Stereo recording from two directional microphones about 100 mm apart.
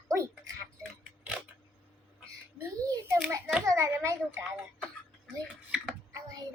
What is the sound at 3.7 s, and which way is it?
Speech, 30° right (ahead or behind).